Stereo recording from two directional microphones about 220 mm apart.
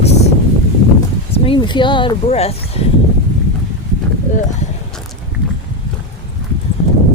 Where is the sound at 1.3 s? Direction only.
20° left (ahead or behind).